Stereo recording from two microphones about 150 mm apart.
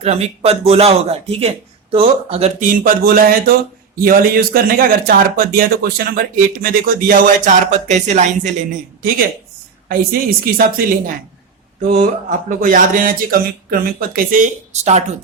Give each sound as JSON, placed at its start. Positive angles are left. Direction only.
{"t": 0.0, "sound": "speech", "side_deg": -45}
{"t": 2.6, "sound": "speech", "side_deg": -65}
{"t": 11.9, "sound": "speech", "side_deg": -55}
{"t": 13.7, "sound": "speech", "side_deg": -80}